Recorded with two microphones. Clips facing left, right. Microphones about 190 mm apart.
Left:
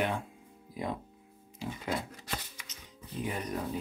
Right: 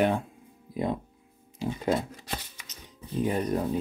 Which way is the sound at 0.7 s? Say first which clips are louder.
Right 8 dB; 25° right (ahead or behind).